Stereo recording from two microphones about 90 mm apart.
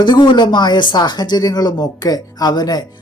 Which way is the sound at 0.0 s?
55° left (ahead or behind).